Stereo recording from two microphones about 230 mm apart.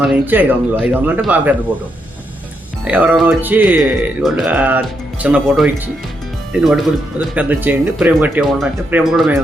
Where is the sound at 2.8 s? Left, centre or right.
Centre.